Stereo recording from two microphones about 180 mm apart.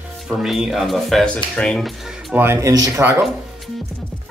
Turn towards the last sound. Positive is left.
turn(degrees=-15)  # may be behind; listen again after turning